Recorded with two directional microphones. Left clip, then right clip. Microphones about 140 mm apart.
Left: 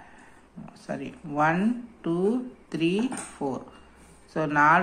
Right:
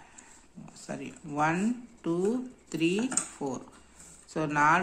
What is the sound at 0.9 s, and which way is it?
Speech, 25° right (ahead or behind).